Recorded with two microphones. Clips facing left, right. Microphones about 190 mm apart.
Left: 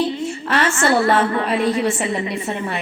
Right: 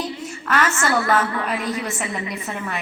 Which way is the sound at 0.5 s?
30° left (ahead or behind).